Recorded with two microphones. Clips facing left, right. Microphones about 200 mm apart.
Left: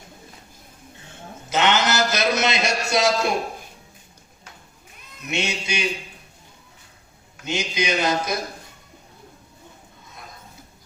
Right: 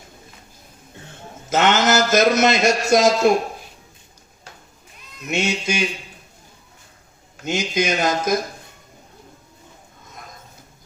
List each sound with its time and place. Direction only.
1.5 s a man's voice: 45° right (ahead or behind)
5.2 s a man's voice: 45° right (ahead or behind)
7.4 s a man's voice: 45° right (ahead or behind)